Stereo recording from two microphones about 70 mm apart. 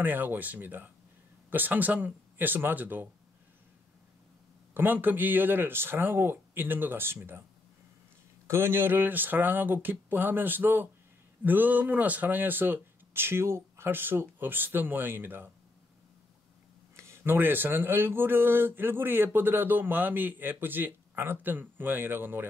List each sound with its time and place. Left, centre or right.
0.0 s speech: right
4.7 s speech: right
8.5 s speech: right
16.9 s speech: right